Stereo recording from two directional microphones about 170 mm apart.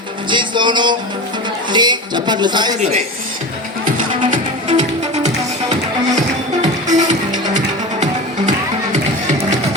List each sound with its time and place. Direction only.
0.3 s music: 25° right (ahead or behind)
1.7 s a sound: 25° right (ahead or behind)
4.8 s music: 40° right (ahead or behind)
6.8 s music: 45° right (ahead or behind)